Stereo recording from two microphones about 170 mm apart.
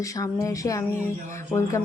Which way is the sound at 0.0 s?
20° left (ahead or behind).